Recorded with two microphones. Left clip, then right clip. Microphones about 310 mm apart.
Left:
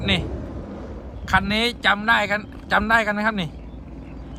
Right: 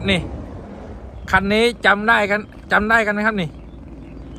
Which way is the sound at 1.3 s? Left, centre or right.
Centre.